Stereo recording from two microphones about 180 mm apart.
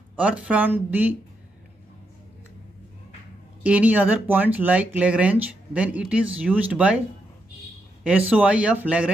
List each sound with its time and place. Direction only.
0.1 s speech: 5° right (ahead or behind)
3.6 s speech: 10° right (ahead or behind)
8.0 s speech: 5° right (ahead or behind)